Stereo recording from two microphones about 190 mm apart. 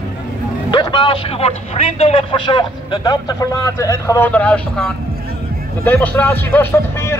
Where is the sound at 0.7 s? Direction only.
25° left (ahead or behind).